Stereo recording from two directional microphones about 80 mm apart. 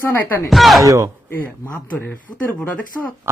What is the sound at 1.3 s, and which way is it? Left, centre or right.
Speech, left.